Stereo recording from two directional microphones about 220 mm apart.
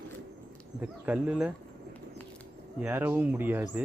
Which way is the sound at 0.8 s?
5° right (ahead or behind).